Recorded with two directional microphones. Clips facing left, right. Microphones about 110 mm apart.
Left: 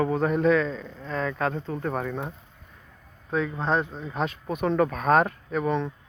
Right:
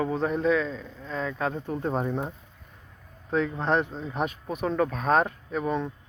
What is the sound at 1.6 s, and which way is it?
Speech, 20° right (ahead or behind).